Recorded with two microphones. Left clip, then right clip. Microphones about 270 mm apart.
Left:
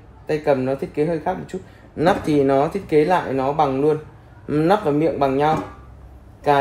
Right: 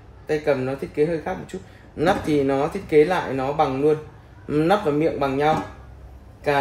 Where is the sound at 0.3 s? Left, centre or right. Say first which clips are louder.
Left 3 dB; centre.